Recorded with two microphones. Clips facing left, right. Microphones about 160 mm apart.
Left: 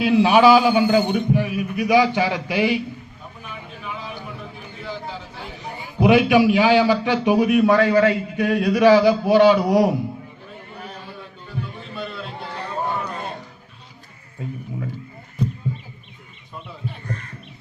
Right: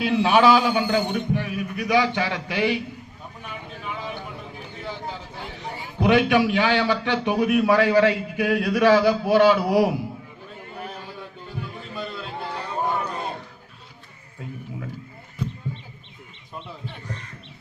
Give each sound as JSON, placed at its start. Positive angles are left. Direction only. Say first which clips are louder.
{"t": 0.0, "sound": "a man's voice", "louder": "left 4 dB", "side_deg": 5}
{"t": 6.0, "sound": "a man's voice", "louder": "left 4 dB", "side_deg": 10}